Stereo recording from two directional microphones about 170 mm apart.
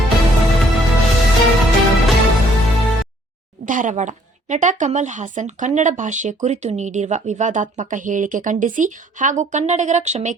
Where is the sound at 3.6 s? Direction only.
50° right (ahead or behind).